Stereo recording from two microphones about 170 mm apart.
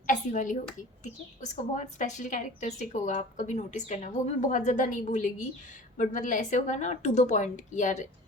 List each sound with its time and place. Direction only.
0.1 s a woman's voice: 50° left (ahead or behind)